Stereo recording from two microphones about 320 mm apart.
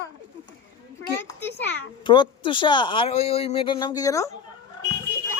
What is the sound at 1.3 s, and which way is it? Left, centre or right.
A child's voice, centre.